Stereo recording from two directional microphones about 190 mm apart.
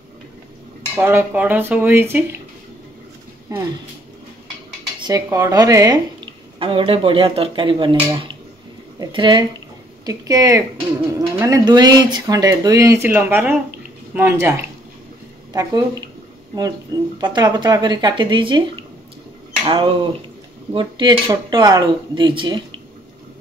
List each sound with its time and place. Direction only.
0.9 s speech: 10° right (ahead or behind)
5.0 s a woman's voice: 20° right (ahead or behind)
15.5 s a woman's voice: 20° right (ahead or behind)
17.2 s a woman's voice: 25° right (ahead or behind)